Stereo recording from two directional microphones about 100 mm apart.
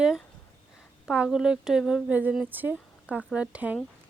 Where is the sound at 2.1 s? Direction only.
15° right (ahead or behind).